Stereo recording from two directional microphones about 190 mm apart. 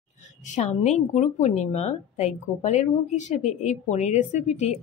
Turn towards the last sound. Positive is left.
turn(degrees=35)  # may be behind; listen again after turning